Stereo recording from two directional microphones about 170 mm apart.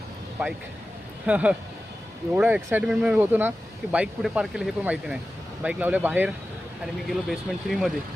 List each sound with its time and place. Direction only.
0.4 s speech: 10° right (ahead or behind)